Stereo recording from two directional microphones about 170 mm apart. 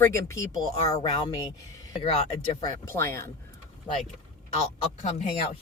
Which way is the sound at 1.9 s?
40° left (ahead or behind).